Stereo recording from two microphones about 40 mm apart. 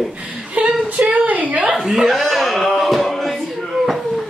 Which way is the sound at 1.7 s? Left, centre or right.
Centre.